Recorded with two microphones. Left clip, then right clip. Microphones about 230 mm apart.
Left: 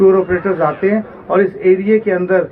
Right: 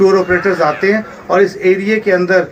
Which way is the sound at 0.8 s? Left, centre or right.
Right.